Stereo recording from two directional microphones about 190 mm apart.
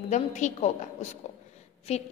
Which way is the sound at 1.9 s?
35° left (ahead or behind).